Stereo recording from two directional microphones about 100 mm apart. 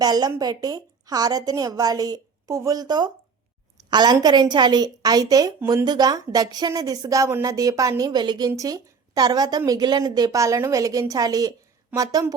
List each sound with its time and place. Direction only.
0.0 s a woman's voice: 40° right (ahead or behind)
11.9 s a woman's voice: 15° right (ahead or behind)